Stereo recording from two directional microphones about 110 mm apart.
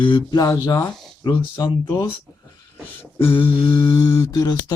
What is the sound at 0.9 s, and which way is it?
Speech, centre (ahead or behind).